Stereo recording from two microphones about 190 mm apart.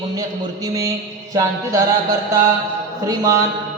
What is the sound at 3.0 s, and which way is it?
Mantra, 15° right (ahead or behind).